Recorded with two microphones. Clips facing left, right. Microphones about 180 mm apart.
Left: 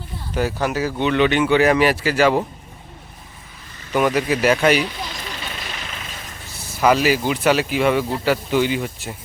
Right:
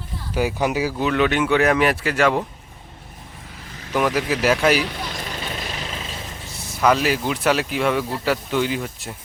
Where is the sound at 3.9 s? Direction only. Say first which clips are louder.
Left 2 dB; centre (ahead or behind).